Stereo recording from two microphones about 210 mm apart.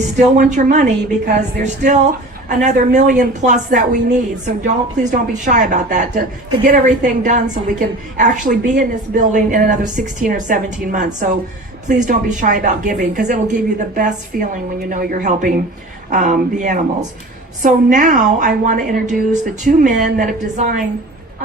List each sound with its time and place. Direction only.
0.0 s a woman's voice: 35° right (ahead or behind)
17.9 s a woman's voice: 35° right (ahead or behind)